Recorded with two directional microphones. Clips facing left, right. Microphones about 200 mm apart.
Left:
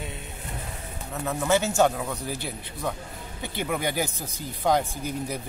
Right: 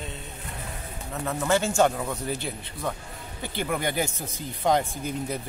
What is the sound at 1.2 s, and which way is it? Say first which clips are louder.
Speech: left 1 dB; 5° left (ahead or behind).